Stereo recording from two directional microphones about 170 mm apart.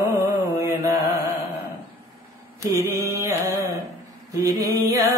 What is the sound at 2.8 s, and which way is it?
Carnatic music, 15° right (ahead or behind).